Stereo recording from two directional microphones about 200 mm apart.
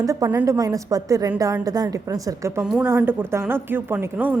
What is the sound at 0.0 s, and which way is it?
A woman's voice, 15° right (ahead or behind).